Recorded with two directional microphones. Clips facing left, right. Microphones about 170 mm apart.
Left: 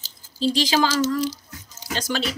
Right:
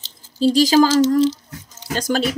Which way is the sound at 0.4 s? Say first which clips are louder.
Right 7 dB; 45° right (ahead or behind).